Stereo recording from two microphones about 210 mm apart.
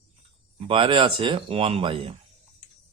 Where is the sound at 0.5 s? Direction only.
25° right (ahead or behind).